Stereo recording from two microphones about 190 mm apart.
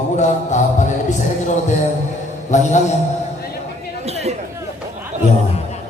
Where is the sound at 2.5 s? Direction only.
40° left (ahead or behind).